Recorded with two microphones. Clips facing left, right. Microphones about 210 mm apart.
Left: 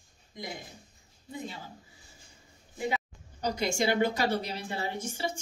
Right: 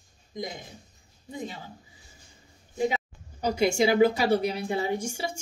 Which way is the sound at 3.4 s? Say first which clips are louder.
Right 6 dB; 10° right (ahead or behind).